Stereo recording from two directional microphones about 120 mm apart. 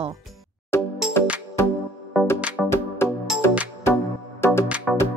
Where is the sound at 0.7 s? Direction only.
20° left (ahead or behind).